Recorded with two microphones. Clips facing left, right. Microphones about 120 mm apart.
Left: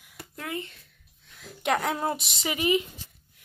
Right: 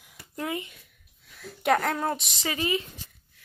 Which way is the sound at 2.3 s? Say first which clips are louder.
Left 3 dB; 20° left (ahead or behind).